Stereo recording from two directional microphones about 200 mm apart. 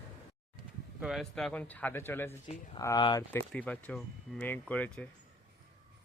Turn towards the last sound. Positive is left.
turn(degrees=5)  # may be behind; listen again after turning